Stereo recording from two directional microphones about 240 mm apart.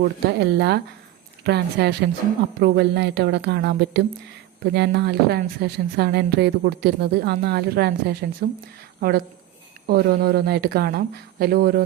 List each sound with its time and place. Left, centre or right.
0.0 s a woman's voice: right